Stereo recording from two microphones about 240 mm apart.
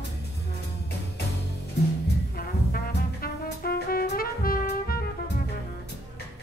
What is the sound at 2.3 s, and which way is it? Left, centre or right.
Brass instrument, left.